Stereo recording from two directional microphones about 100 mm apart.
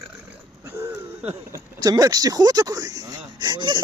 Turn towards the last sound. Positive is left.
turn(degrees=-50)  # may be behind; listen again after turning